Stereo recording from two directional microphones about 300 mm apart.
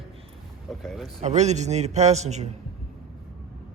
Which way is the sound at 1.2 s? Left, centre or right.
Right.